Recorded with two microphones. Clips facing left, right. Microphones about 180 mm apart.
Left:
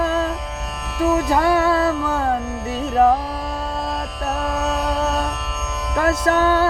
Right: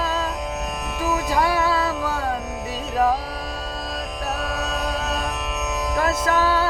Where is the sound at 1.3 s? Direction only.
55° left (ahead or behind).